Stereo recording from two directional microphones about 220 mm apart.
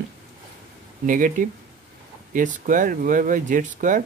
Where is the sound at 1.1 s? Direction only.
35° right (ahead or behind).